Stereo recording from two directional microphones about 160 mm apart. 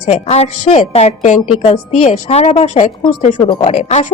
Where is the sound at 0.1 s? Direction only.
40° left (ahead or behind).